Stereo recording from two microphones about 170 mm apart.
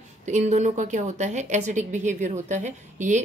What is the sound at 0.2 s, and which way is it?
A woman's voice, 45° right (ahead or behind).